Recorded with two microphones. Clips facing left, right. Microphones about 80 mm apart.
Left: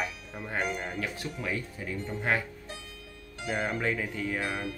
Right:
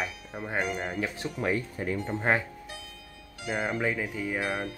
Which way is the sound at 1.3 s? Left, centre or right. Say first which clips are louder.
Right 9 dB; right.